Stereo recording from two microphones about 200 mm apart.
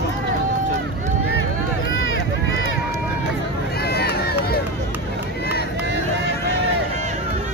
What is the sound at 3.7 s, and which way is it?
Run, 50° left (ahead or behind).